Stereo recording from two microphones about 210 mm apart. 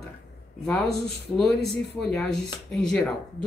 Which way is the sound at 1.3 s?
5° left (ahead or behind).